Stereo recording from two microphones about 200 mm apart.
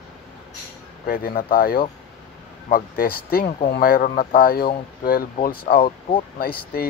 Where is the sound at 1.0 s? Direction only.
50° left (ahead or behind).